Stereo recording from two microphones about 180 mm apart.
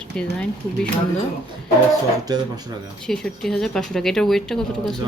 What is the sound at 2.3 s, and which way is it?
Speech, 20° right (ahead or behind).